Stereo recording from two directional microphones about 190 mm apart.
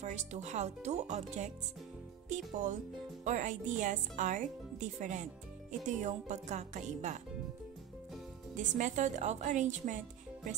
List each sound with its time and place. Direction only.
0.0 s speech: 40° right (ahead or behind)
8.5 s speech: 40° right (ahead or behind)